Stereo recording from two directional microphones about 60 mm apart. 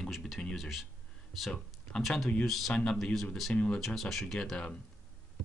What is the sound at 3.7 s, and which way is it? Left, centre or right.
Speech, centre.